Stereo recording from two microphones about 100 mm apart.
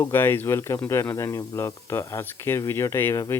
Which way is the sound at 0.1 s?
20° left (ahead or behind).